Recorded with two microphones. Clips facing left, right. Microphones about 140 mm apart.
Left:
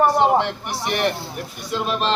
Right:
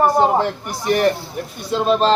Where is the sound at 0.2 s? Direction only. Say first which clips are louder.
Right 1 dB; 40° right (ahead or behind).